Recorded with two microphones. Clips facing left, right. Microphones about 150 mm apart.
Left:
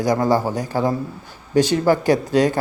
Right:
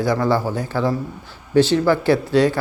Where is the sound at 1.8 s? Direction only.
45° left (ahead or behind).